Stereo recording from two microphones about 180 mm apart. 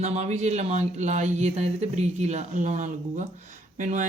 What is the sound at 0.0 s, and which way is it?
Speech, 40° right (ahead or behind).